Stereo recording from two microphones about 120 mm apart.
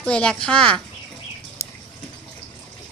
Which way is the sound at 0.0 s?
5° left (ahead or behind).